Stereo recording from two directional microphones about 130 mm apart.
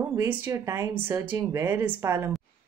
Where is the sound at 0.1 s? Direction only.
20° right (ahead or behind).